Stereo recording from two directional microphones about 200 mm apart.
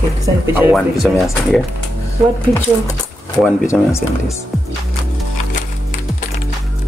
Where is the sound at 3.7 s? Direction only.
15° left (ahead or behind).